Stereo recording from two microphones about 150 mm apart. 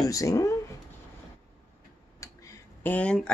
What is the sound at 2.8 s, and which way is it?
Speech, 10° left (ahead or behind).